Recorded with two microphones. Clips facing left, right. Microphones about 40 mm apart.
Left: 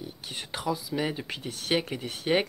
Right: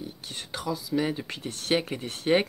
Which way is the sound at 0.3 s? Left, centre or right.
Centre.